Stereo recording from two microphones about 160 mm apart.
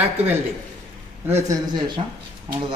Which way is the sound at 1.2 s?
15° right (ahead or behind).